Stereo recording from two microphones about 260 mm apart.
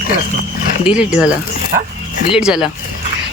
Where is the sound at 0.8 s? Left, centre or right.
Centre.